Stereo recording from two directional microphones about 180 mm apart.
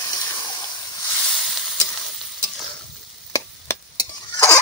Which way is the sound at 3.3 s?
15° left (ahead or behind).